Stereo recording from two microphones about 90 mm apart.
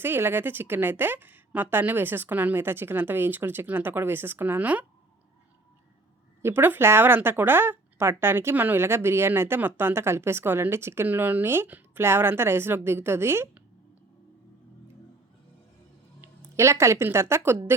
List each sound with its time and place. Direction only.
0.0 s speech: 25° right (ahead or behind)
6.4 s speech: 25° right (ahead or behind)
16.6 s speech: 30° right (ahead or behind)